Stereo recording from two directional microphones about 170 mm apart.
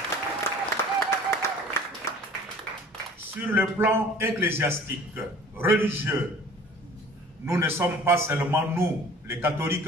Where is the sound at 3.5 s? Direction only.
10° right (ahead or behind).